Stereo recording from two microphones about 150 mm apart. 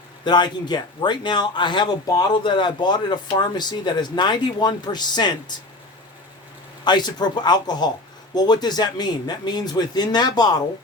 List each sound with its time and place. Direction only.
0.3 s speech: 30° left (ahead or behind)
6.8 s speech: 30° left (ahead or behind)